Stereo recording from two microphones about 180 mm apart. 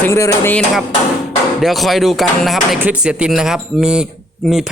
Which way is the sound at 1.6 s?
Centre (ahead or behind).